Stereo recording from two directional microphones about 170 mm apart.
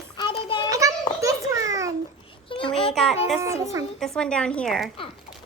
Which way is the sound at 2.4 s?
30° left (ahead or behind).